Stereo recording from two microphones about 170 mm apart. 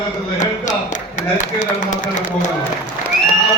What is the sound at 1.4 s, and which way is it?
Speech, 45° left (ahead or behind).